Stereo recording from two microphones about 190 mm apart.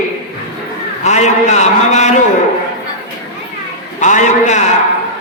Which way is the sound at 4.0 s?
40° left (ahead or behind).